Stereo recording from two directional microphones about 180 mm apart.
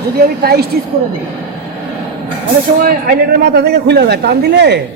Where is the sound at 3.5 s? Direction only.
65° right (ahead or behind).